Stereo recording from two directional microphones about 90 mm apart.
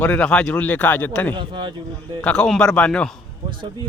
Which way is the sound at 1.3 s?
70° right (ahead or behind).